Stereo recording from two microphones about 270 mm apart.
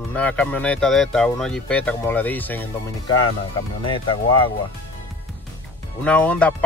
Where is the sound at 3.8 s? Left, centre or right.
Centre.